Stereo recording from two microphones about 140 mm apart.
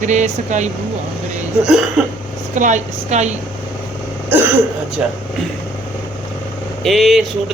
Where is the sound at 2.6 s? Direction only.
60° right (ahead or behind).